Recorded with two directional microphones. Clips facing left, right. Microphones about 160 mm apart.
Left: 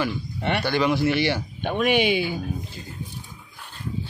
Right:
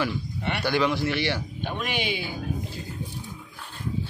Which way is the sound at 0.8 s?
15° left (ahead or behind).